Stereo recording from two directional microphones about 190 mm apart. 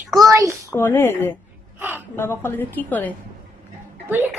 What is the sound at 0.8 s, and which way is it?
Speech, 10° left (ahead or behind).